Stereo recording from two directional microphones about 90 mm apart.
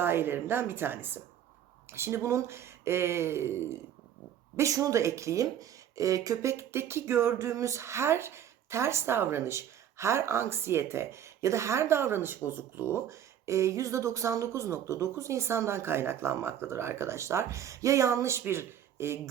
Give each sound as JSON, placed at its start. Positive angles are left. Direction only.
{"t": 0.0, "sound": "speech", "side_deg": -25}
{"t": 4.5, "sound": "speech", "side_deg": -35}